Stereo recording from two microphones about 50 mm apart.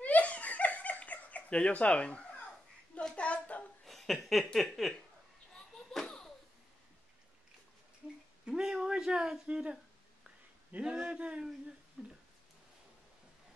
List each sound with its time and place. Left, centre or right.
0.0 s laughter: left
1.7 s speech: left
3.0 s a sound: centre
3.8 s a sound: centre
8.5 s speech: centre
10.8 s speech: centre